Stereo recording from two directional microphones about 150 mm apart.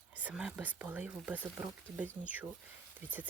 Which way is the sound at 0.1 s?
10° right (ahead or behind).